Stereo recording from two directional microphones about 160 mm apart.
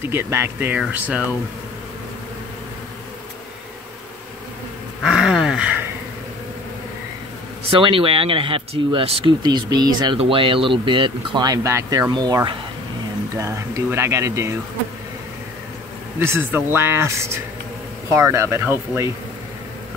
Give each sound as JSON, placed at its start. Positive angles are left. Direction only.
{"t": 0.0, "sound": "speech", "side_deg": -15}
{"t": 5.0, "sound": "a sound", "side_deg": -5}
{"t": 7.7, "sound": "speech", "side_deg": -35}
{"t": 16.2, "sound": "speech", "side_deg": -15}